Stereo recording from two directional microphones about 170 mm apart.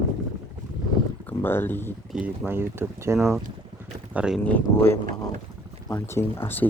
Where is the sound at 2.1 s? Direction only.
5° right (ahead or behind).